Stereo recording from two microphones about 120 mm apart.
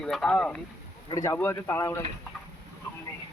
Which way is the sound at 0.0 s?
5° left (ahead or behind).